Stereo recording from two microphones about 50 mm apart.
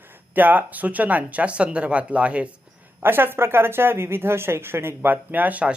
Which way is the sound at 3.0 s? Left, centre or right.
Right.